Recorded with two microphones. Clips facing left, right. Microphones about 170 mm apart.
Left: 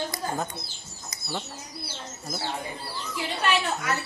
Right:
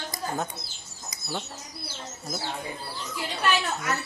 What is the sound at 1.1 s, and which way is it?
Bird, centre (ahead or behind).